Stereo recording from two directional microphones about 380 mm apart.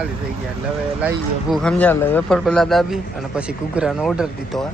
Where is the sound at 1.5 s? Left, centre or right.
Centre.